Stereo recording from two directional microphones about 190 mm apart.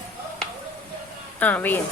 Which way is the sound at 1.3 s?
10° left (ahead or behind).